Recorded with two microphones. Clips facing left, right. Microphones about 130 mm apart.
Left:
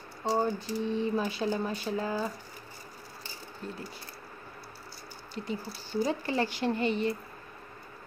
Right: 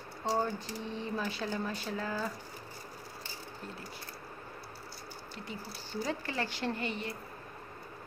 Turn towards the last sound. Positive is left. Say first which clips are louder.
# left 7 dB
turn(degrees=25)  # may be behind; listen again after turning